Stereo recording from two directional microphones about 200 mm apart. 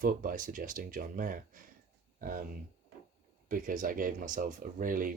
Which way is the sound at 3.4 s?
45° right (ahead or behind).